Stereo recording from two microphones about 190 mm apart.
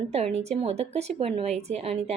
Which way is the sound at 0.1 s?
35° right (ahead or behind).